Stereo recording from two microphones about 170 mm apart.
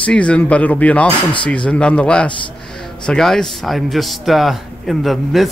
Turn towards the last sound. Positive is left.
turn(degrees=0)  # may be behind; listen again after turning